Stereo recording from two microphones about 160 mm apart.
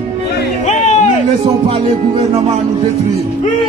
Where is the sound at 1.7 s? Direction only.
35° right (ahead or behind).